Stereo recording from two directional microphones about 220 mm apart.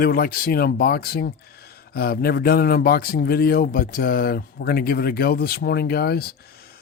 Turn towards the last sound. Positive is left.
turn(degrees=45)  # may be behind; listen again after turning